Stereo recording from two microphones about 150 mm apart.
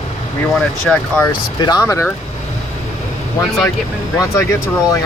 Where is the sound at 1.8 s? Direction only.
15° left (ahead or behind).